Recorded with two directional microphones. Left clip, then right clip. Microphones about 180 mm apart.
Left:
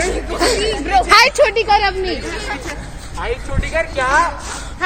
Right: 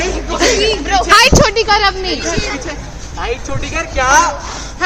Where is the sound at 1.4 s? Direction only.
25° right (ahead or behind).